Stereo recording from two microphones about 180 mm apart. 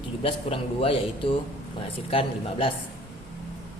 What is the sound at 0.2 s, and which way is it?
Speech, 30° left (ahead or behind).